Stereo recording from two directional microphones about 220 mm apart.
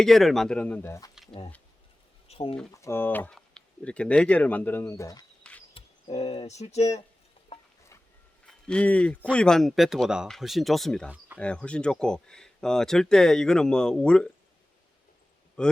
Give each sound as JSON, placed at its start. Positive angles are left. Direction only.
{"t": 0.0, "sound": "speech", "side_deg": 0}
{"t": 2.2, "sound": "a sound", "side_deg": 25}
{"t": 2.7, "sound": "speech", "side_deg": 10}
{"t": 5.4, "sound": "insect", "side_deg": 5}
{"t": 5.7, "sound": "speech", "side_deg": 25}
{"t": 8.4, "sound": "speech", "side_deg": 5}
{"t": 15.6, "sound": "speech", "side_deg": 5}